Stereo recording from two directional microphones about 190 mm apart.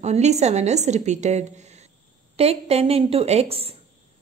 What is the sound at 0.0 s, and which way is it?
A woman's voice, 35° right (ahead or behind).